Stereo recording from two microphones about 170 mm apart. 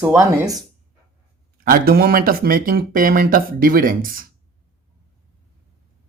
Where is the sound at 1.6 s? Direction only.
60° right (ahead or behind).